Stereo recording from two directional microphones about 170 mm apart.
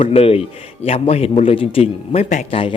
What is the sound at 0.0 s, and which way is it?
Speech, 35° left (ahead or behind).